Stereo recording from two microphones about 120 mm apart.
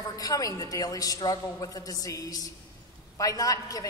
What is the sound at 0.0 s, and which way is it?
A woman's voice, 30° left (ahead or behind).